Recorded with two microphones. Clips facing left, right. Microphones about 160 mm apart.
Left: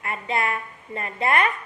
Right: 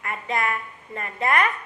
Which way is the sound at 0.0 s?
30° left (ahead or behind).